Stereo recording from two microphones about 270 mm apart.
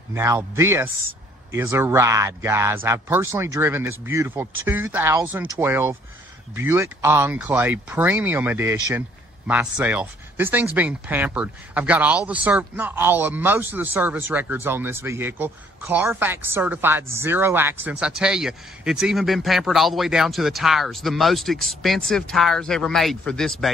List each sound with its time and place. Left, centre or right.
0.1 s a man's voice: centre